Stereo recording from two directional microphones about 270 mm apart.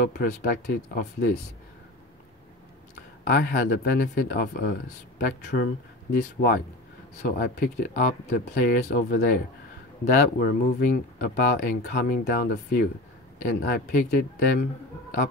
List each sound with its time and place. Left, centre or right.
0.2 s speech: left
3.3 s speech: left